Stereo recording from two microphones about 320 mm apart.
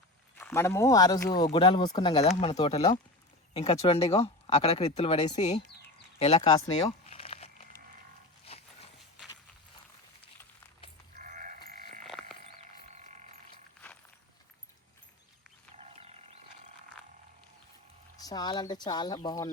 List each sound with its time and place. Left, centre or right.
0.3 s speech: centre
6.8 s a sound: centre
11.2 s sheep: right
15.7 s livestock: centre
18.2 s speech: centre